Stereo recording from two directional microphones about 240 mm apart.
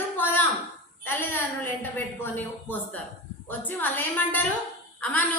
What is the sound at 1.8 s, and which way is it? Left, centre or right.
A woman's voice, centre.